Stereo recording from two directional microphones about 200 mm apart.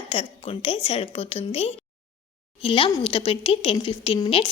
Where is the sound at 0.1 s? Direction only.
30° left (ahead or behind).